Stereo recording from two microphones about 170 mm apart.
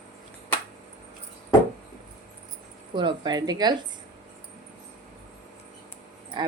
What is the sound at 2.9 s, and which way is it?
Speech, 25° right (ahead or behind).